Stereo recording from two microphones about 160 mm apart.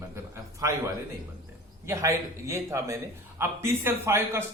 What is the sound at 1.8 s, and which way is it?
A man's voice, 20° right (ahead or behind).